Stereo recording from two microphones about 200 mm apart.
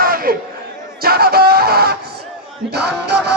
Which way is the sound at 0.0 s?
45° right (ahead or behind).